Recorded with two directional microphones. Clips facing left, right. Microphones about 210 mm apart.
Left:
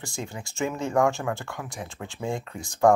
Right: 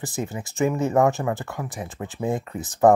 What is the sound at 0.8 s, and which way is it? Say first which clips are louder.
Speech: right 1 dB; 20° right (ahead or behind).